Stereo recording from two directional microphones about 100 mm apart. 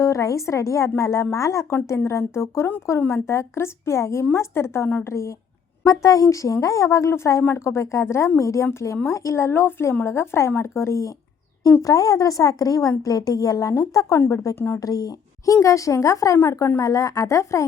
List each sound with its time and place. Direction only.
0.0 s a woman's voice: 30° left (ahead or behind)
14.8 s a woman's voice: 40° left (ahead or behind)